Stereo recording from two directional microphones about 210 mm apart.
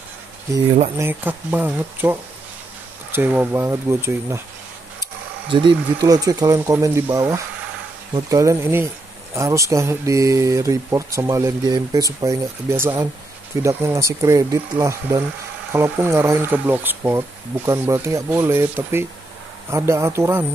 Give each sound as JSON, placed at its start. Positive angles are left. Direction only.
{"t": 0.7, "sound": "speech", "side_deg": -35}
{"t": 0.9, "sound": "speech", "side_deg": -10}
{"t": 5.5, "sound": "speech", "side_deg": -20}